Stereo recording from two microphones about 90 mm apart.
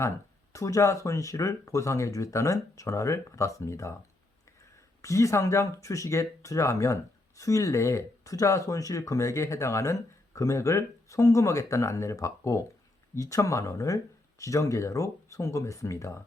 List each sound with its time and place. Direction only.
0.5 s speech: 35° left (ahead or behind)
5.0 s speech: 35° left (ahead or behind)